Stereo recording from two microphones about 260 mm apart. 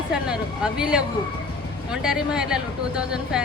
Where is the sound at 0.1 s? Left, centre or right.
Centre.